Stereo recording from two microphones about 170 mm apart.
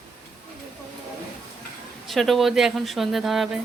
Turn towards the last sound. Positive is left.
turn(degrees=0)  # may be behind; listen again after turning